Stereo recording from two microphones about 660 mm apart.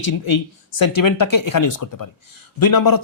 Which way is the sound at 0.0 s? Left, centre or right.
Left.